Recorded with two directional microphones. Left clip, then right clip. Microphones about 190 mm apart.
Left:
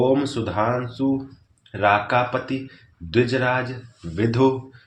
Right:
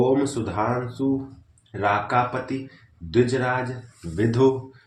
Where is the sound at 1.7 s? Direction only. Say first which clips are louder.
Left 3 dB; 40° left (ahead or behind).